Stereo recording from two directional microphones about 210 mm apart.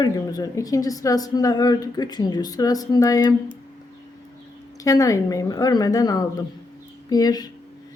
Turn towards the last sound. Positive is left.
turn(degrees=20)  # may be behind; listen again after turning